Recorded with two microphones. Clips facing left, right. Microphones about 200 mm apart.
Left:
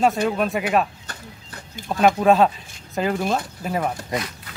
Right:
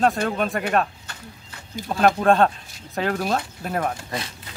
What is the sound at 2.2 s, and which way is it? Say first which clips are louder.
Speech: left 1 dB; centre (ahead or behind).